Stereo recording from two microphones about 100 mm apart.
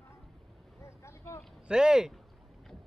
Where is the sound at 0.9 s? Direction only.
30° left (ahead or behind).